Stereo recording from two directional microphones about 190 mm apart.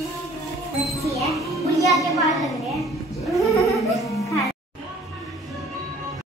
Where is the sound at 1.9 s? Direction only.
Centre (ahead or behind).